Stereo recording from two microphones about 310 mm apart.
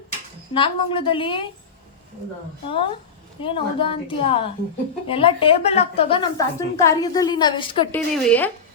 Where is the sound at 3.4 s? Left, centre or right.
Centre.